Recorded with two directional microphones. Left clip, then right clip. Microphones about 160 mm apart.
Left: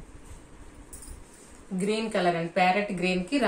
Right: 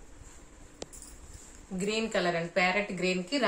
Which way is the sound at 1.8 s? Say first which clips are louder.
Left 3 dB; 45° right (ahead or behind).